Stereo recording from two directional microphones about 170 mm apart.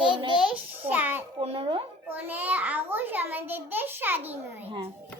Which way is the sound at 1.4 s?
35° right (ahead or behind).